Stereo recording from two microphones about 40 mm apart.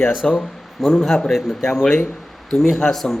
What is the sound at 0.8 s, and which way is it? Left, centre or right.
A man's voice, centre.